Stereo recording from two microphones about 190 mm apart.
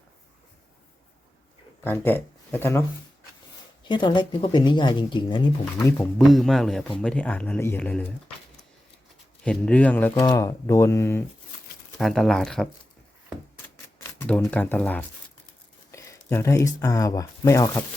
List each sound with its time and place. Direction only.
1.8 s speech: 10° left (ahead or behind)
3.8 s speech: 25° left (ahead or behind)
6.1 s speech: centre (ahead or behind)
9.4 s speech: 5° left (ahead or behind)
10.1 s speech: 20° left (ahead or behind)
11.9 s speech: centre (ahead or behind)
14.0 s speech: 10° left (ahead or behind)